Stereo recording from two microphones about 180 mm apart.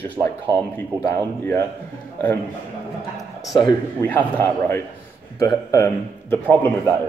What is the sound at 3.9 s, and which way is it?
Speech, 10° left (ahead or behind).